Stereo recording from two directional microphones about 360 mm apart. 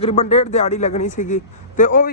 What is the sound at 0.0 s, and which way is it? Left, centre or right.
A man's voice, centre.